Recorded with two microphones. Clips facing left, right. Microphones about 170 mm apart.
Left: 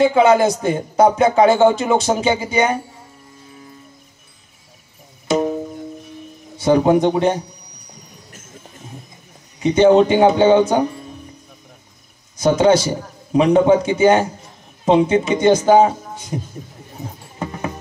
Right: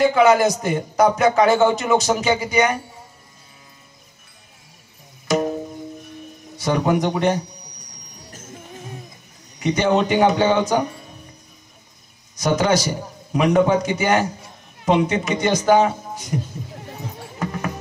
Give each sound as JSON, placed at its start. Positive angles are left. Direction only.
{"t": 0.0, "sound": "a man's voice", "side_deg": 30}
{"t": 5.3, "sound": "music", "side_deg": 25}
{"t": 6.5, "sound": "a man's voice", "side_deg": 30}
{"t": 9.6, "sound": "a man's voice", "side_deg": 30}
{"t": 12.4, "sound": "a man's voice", "side_deg": 30}